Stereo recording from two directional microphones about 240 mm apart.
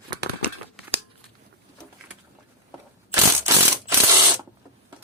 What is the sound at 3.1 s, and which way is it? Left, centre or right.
Mechanisms, centre.